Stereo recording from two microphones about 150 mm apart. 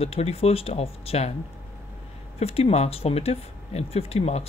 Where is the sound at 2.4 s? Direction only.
40° left (ahead or behind).